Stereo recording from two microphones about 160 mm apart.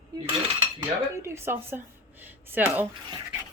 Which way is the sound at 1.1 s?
15° right (ahead or behind).